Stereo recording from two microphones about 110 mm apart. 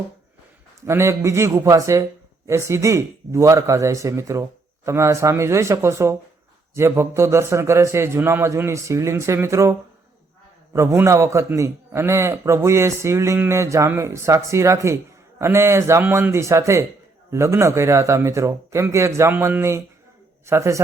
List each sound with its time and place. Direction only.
0.8 s a man's voice: 25° right (ahead or behind)